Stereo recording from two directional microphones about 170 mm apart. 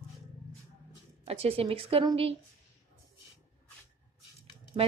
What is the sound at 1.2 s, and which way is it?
A woman's voice, 35° right (ahead or behind).